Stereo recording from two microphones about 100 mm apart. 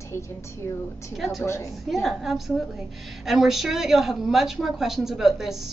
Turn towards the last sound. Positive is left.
turn(degrees=-5)  # may be behind; listen again after turning